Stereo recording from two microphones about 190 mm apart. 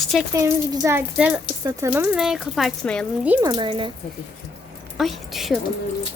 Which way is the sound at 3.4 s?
20° right (ahead or behind).